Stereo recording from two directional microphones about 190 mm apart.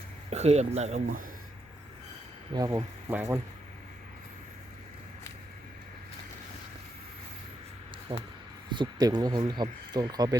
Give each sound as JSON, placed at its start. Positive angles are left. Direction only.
{"t": 0.3, "sound": "speech", "side_deg": -35}
{"t": 2.5, "sound": "speech", "side_deg": -20}
{"t": 8.1, "sound": "speech", "side_deg": -30}